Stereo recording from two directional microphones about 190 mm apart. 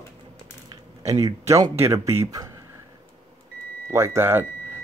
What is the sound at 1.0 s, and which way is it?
Speech, 15° right (ahead or behind).